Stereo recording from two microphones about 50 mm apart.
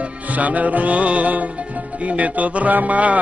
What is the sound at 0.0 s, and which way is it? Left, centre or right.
Music, right.